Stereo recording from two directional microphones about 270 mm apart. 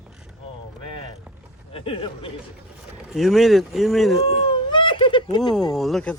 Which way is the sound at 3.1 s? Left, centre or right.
Centre.